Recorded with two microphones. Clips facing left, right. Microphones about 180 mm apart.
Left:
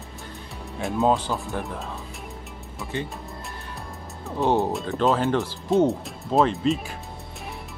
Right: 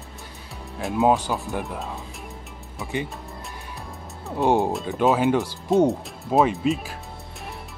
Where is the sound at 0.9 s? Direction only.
10° right (ahead or behind).